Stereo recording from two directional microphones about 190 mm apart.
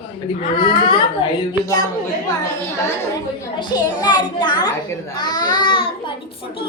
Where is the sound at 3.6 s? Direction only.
20° left (ahead or behind).